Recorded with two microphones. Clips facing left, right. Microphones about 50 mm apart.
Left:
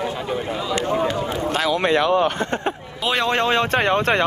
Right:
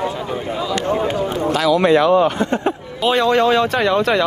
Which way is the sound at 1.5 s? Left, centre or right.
Left.